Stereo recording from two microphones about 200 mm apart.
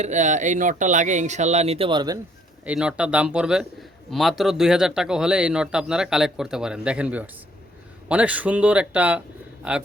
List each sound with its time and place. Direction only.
0.0 s speech: 35° right (ahead or behind)
2.6 s speech: 5° right (ahead or behind)